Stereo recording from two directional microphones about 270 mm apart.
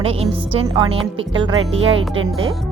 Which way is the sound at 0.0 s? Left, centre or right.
Centre.